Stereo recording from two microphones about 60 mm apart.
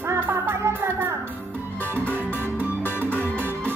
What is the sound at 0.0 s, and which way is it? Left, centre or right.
Music, right.